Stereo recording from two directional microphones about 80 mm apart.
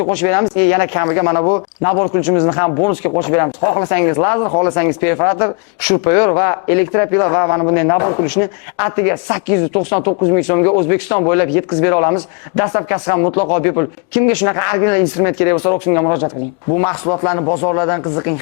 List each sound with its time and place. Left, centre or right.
0.1 s speech: centre